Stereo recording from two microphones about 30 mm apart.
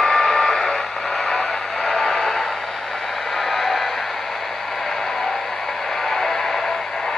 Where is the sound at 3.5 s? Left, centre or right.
Centre.